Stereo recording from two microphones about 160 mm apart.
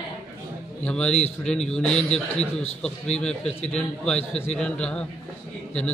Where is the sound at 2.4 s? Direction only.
40° left (ahead or behind).